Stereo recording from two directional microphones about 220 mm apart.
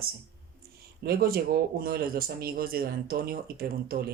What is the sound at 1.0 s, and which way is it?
Speech, 45° right (ahead or behind).